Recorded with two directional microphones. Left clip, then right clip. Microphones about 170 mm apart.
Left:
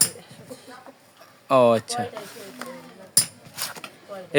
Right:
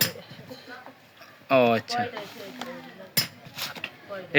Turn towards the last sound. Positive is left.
turn(degrees=10)  # may be behind; listen again after turning